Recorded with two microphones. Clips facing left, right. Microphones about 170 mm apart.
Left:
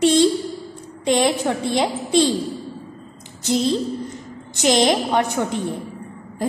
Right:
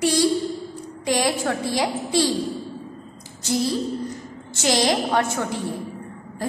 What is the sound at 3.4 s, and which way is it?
A woman's voice, 20° left (ahead or behind).